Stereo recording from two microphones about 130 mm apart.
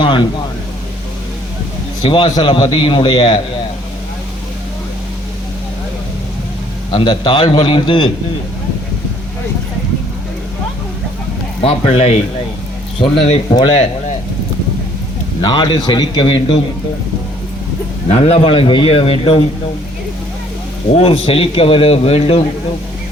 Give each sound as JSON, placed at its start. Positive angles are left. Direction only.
{"t": 0.0, "sound": "a sound", "side_deg": 40}
{"t": 2.0, "sound": "a man's voice", "side_deg": 45}
{"t": 6.9, "sound": "a man's voice", "side_deg": 35}
{"t": 11.6, "sound": "a man's voice", "side_deg": 50}
{"t": 13.0, "sound": "a man's voice", "side_deg": 35}
{"t": 15.4, "sound": "a man's voice", "side_deg": 35}
{"t": 18.1, "sound": "a man's voice", "side_deg": 55}
{"t": 20.9, "sound": "a man's voice", "side_deg": 45}